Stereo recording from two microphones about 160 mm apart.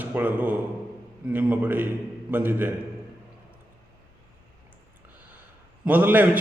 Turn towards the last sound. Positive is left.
turn(degrees=-10)  # may be behind; listen again after turning